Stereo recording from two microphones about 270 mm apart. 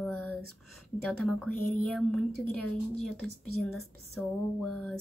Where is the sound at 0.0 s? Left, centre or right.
Centre.